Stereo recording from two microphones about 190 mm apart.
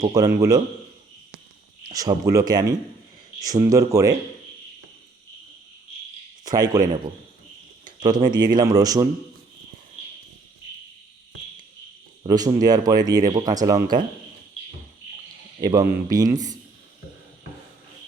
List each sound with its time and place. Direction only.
0.2 s speech: 20° right (ahead or behind)
1.8 s speech: 20° right (ahead or behind)
6.4 s speech: 20° right (ahead or behind)
8.1 s speech: 20° right (ahead or behind)
12.2 s speech: 20° right (ahead or behind)
15.6 s speech: 20° right (ahead or behind)